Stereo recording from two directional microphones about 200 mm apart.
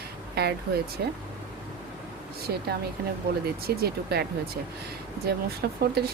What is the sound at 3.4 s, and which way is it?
Speech, 50° right (ahead or behind).